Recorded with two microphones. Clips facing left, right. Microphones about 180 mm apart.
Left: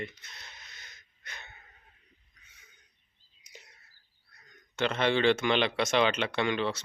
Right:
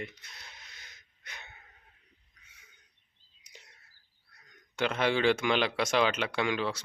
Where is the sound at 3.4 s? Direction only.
5° left (ahead or behind).